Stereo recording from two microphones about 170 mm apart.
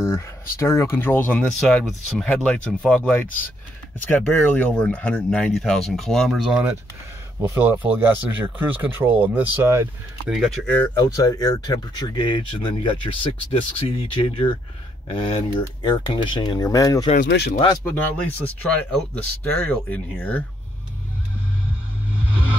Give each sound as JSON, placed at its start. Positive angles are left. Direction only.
{"t": 0.6, "sound": "speech", "side_deg": 15}
{"t": 7.4, "sound": "speech", "side_deg": -15}
{"t": 10.3, "sound": "speech", "side_deg": 0}
{"t": 11.0, "sound": "speech", "side_deg": 20}
{"t": 17.2, "sound": "speech", "side_deg": 80}
{"t": 17.8, "sound": "speech", "side_deg": 10}